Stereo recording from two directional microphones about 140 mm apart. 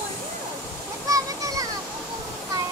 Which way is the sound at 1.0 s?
25° right (ahead or behind).